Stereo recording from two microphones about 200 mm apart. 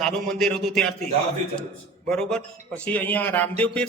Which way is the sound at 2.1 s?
5° left (ahead or behind).